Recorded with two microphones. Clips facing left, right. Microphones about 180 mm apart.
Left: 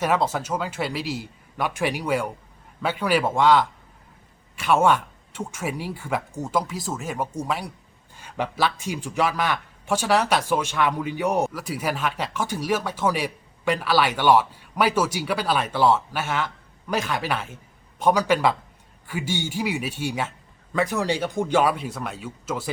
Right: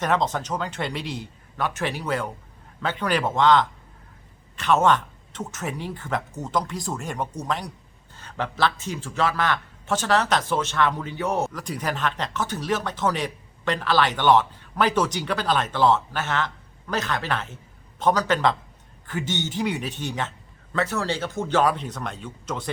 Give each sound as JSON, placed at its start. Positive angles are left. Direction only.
{"t": 0.0, "sound": "a man's voice", "side_deg": 10}